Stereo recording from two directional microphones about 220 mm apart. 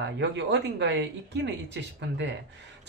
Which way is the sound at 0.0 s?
55° right (ahead or behind).